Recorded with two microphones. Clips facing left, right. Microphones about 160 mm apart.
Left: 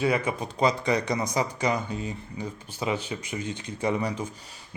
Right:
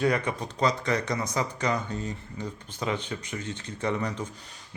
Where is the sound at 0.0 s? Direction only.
5° left (ahead or behind).